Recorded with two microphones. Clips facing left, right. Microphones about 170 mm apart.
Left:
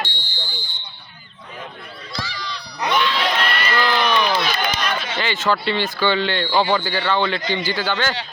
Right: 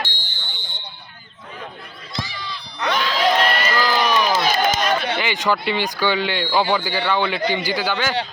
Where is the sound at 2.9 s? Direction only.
40° right (ahead or behind).